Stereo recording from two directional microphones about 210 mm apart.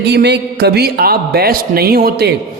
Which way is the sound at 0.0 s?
55° right (ahead or behind).